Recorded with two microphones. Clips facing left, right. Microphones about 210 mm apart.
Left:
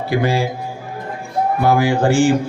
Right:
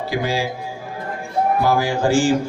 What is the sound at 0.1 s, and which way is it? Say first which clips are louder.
Speech: left 5 dB; 60° left (ahead or behind).